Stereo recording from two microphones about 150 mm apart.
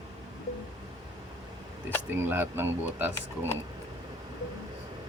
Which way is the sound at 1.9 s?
15° right (ahead or behind).